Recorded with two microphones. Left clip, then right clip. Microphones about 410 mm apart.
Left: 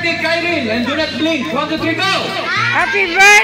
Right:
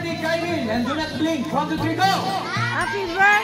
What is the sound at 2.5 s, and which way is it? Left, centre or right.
Speech, right.